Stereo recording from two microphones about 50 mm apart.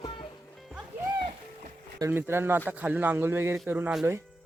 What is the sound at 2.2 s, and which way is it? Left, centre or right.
Speech, right.